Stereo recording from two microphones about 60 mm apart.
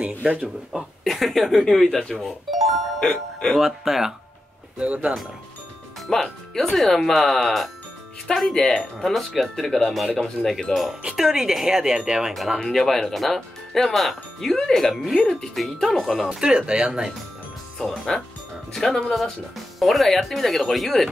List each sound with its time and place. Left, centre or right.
0.2 s speech: right
1.0 s speech: centre
4.7 s speech: right
6.0 s speech: centre
12.5 s speech: centre
15.1 s speech: centre
15.5 s speech: centre
16.3 s speech: centre
17.7 s speech: centre